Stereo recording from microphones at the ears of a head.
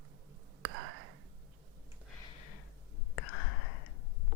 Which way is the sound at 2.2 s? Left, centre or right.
Left.